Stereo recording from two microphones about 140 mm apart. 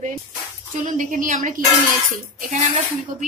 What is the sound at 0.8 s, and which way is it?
Speech, 70° right (ahead or behind).